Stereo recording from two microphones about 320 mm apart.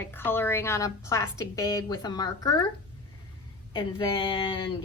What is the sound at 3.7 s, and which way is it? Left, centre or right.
Speech, centre.